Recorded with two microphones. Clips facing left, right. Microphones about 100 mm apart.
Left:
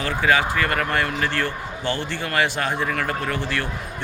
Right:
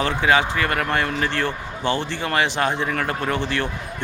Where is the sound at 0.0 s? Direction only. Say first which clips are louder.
Right 1 dB; 25° right (ahead or behind).